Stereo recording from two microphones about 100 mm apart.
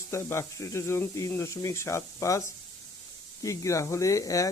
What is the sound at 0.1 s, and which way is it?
Speech, 25° left (ahead or behind).